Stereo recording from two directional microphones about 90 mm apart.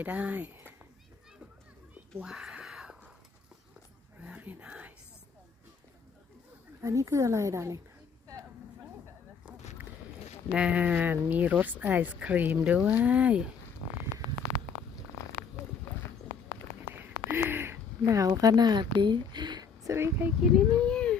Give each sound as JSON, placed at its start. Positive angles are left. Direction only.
{"t": 0.0, "sound": "speech", "side_deg": -15}
{"t": 2.2, "sound": "a sound", "side_deg": -10}
{"t": 4.2, "sound": "a sound", "side_deg": -20}
{"t": 6.8, "sound": "a woman's voice", "side_deg": -35}
{"t": 10.5, "sound": "speech", "side_deg": -10}
{"t": 16.9, "sound": "a sound", "side_deg": -25}
{"t": 18.0, "sound": "a woman's voice", "side_deg": -35}
{"t": 19.9, "sound": "speech", "side_deg": -25}
{"t": 20.6, "sound": "speech", "side_deg": 10}